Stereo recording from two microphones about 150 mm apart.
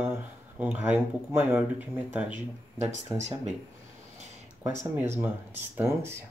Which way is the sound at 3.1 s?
50° right (ahead or behind).